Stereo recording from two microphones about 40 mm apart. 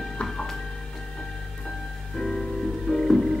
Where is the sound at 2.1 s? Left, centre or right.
Centre.